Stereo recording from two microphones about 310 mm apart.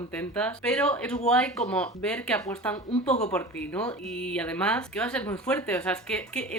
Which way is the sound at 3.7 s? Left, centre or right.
Centre.